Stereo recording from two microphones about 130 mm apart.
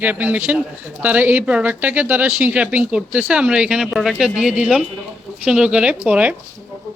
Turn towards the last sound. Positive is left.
turn(degrees=-10)  # may be behind; listen again after turning